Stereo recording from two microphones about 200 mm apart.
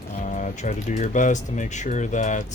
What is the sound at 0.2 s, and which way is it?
Speech, 35° left (ahead or behind).